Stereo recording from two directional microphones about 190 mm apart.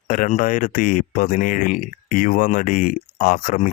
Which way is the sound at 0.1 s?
45° left (ahead or behind).